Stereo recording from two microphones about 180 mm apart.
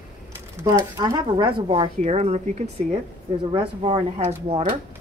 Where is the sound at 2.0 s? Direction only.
40° right (ahead or behind).